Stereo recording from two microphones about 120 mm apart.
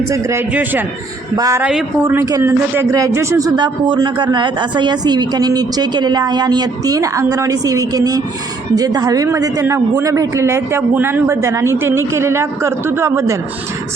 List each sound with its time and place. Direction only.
0.1 s a man's voice: 25° right (ahead or behind)
1.4 s speech: 25° right (ahead or behind)
3.5 s speech: 40° right (ahead or behind); by 13.3 s 20° right (ahead or behind)